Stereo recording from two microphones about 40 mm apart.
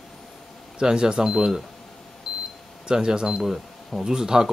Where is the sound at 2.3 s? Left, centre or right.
Right.